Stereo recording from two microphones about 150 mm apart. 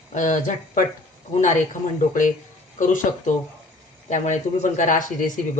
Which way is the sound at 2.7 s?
60° left (ahead or behind).